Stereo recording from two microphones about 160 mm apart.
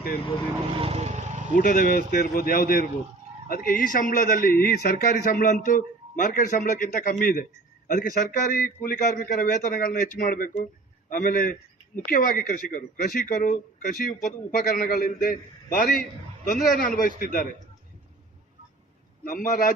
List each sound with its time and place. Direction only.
0.8 s speech: 40° right (ahead or behind)
1.5 s a man's voice: 55° left (ahead or behind)
14.7 s a man's voice: 65° left (ahead or behind)
19.2 s a man's voice: 60° left (ahead or behind)